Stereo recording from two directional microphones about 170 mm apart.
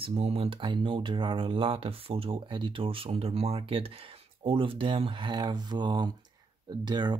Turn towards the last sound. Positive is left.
turn(degrees=-25)  # may be behind; listen again after turning